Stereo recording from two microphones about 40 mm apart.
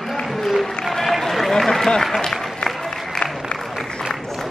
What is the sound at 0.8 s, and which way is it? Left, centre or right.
Run, centre.